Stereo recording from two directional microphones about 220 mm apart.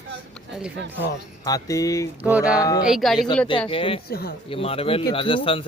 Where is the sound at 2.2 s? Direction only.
5° right (ahead or behind).